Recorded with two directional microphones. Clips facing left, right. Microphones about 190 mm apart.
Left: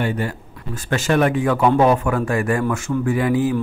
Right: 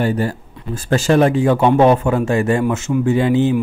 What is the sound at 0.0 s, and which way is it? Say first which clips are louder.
Speech: right 4 dB; 35° right (ahead or behind).